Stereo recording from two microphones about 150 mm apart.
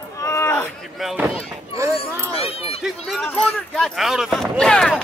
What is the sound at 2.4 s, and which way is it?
Run, 40° left (ahead or behind).